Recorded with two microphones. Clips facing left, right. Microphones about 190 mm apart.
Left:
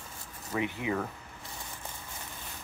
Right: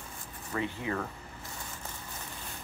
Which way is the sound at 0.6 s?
15° left (ahead or behind).